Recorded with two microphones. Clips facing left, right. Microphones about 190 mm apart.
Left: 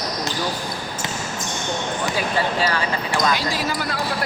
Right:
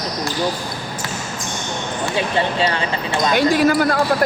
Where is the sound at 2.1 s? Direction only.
25° right (ahead or behind).